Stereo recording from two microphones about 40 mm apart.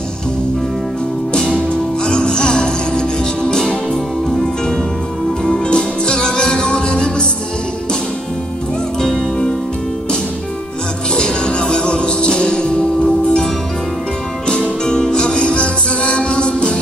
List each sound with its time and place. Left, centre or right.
1.7 s music: left
5.4 s music: centre
11.1 s music: left
14.5 s music: left